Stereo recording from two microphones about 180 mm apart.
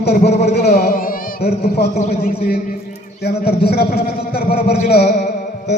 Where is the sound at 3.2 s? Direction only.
60° left (ahead or behind).